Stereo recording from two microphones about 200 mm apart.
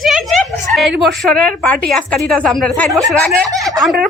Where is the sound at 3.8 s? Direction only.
Centre (ahead or behind).